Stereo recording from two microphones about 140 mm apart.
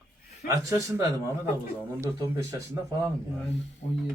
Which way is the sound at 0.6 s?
25° right (ahead or behind).